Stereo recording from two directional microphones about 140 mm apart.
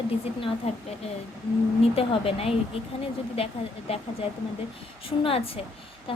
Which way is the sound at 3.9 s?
45° left (ahead or behind).